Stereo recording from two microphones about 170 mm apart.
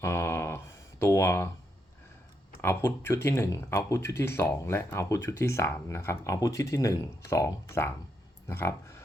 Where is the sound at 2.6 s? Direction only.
15° left (ahead or behind).